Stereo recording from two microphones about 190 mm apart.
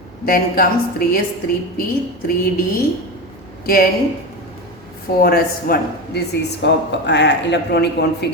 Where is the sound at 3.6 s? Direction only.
50° left (ahead or behind).